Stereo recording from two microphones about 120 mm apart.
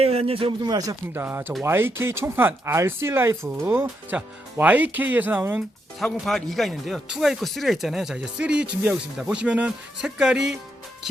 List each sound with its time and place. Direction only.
0.0 s speech: 60° right (ahead or behind)
0.6 s speech: 30° right (ahead or behind)
1.1 s speech: 15° right (ahead or behind)
6.0 s speech: centre (ahead or behind)